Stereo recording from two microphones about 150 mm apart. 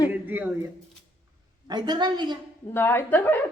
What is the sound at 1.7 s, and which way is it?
Speech, 30° right (ahead or behind).